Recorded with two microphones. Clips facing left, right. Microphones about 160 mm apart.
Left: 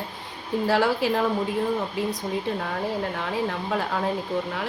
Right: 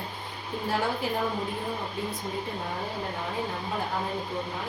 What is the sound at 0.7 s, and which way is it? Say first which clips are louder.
Speech: left 6 dB; 90° left.